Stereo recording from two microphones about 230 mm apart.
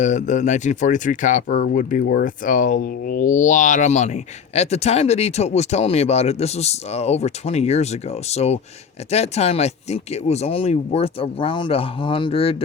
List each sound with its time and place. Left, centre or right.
0.0 s speech: left